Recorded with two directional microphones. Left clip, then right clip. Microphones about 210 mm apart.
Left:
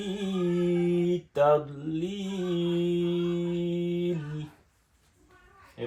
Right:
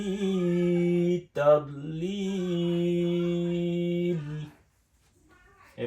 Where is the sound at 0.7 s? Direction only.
25° left (ahead or behind).